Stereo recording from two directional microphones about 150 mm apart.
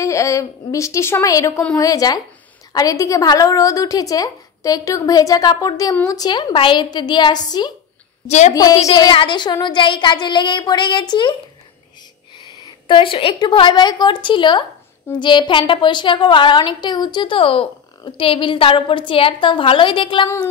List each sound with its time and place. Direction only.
0.0 s a woman's voice: 20° left (ahead or behind)
8.3 s a woman's voice: 50° left (ahead or behind)
9.1 s a woman's voice: 30° left (ahead or behind)
12.8 s a woman's voice: 35° left (ahead or behind)